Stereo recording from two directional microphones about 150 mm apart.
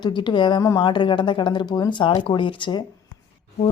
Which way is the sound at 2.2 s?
35° left (ahead or behind).